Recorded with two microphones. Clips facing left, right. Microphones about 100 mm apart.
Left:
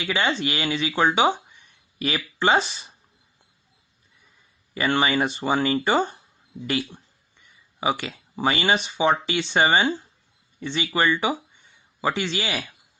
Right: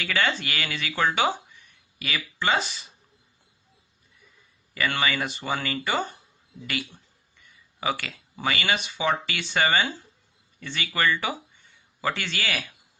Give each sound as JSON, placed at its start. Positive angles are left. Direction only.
{"t": 0.0, "sound": "speech", "side_deg": 20}
{"t": 4.7, "sound": "a man's voice", "side_deg": 25}